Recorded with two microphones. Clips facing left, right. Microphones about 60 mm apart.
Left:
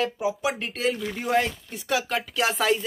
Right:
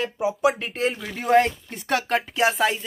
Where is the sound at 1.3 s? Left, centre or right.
Right.